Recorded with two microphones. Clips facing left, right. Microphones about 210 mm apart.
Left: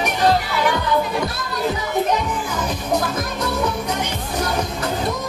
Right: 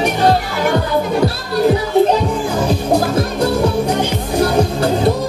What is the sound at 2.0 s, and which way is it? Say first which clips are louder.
Music: right 6 dB; 30° right (ahead or behind).